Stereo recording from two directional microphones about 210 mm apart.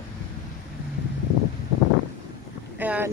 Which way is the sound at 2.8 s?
10° right (ahead or behind).